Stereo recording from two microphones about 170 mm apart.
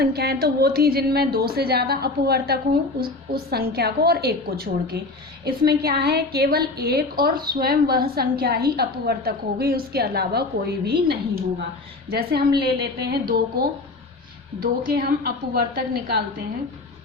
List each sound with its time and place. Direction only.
0.0 s a woman's voice: 70° right (ahead or behind)